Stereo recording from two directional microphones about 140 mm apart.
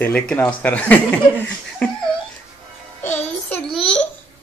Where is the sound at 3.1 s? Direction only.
15° left (ahead or behind).